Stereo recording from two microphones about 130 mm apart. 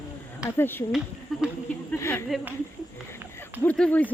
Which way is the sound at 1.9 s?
20° left (ahead or behind).